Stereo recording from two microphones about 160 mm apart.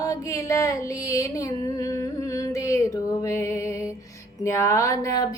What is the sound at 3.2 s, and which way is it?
Music, 20° left (ahead or behind).